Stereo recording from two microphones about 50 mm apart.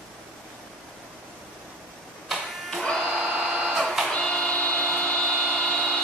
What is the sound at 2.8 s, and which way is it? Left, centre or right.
Printer, centre.